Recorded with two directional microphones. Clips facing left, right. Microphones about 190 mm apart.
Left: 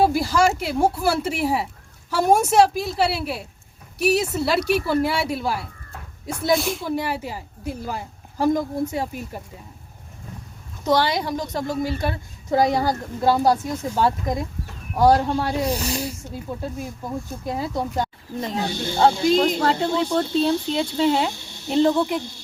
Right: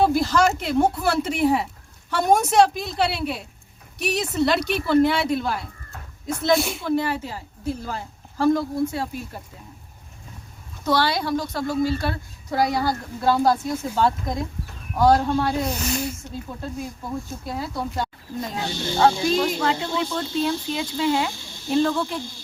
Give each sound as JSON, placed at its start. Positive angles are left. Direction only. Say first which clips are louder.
{"t": 0.0, "sound": "a woman's voice", "louder": "even", "side_deg": 10}
{"t": 6.8, "sound": "a woman's voice", "louder": "right 2 dB", "side_deg": 10}
{"t": 10.8, "sound": "a woman's voice", "louder": "left 1 dB", "side_deg": 15}
{"t": 15.6, "sound": "speech", "louder": "left 2 dB", "side_deg": 35}
{"t": 16.6, "sound": "a woman's voice", "louder": "left 1 dB", "side_deg": 15}
{"t": 18.6, "sound": "speech", "louder": "left 1 dB", "side_deg": 55}
{"t": 20.4, "sound": "speech", "louder": "left 4 dB", "side_deg": 25}